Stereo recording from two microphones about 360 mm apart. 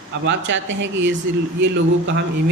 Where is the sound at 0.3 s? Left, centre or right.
Right.